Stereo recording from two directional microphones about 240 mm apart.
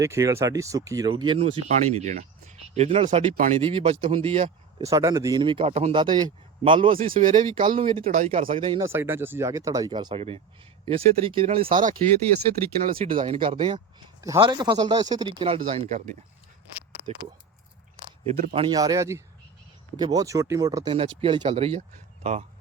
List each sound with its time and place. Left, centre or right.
0.0 s speech: centre; by 4.9 s right
4.9 s speech: centre
7.2 s speech: right
7.8 s speech: right
8.9 s speech: centre; by 11.9 s right
13.0 s speech: right
18.3 s speech: right